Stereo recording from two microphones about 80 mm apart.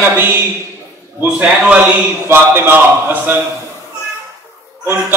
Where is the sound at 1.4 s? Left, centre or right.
Centre.